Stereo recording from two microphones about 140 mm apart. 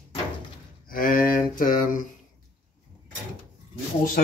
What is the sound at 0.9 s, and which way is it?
Speech, 90° left.